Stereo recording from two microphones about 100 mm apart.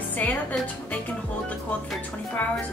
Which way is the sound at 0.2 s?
15° left (ahead or behind).